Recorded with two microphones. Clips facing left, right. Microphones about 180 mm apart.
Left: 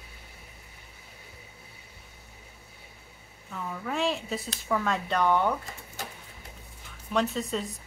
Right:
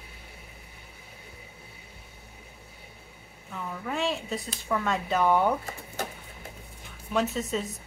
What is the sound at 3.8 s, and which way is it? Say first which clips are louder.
Speech: left 1 dB; centre (ahead or behind).